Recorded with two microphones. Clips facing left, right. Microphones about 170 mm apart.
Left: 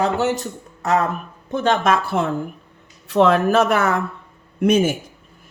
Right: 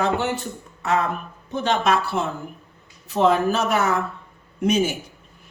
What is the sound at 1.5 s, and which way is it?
Speech, 50° left (ahead or behind).